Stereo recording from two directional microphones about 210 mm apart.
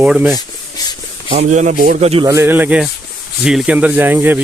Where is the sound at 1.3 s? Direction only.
35° right (ahead or behind).